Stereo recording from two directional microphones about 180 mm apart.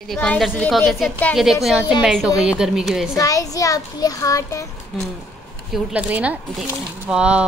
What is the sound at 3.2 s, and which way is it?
A child's voice, 20° left (ahead or behind).